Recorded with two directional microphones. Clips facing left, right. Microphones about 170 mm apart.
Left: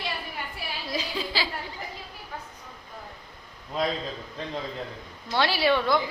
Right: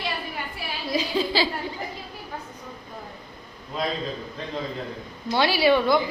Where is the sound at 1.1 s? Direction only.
30° right (ahead or behind).